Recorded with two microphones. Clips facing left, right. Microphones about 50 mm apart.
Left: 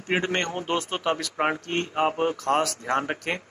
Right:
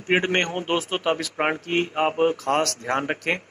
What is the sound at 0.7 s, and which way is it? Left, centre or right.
Speech, centre.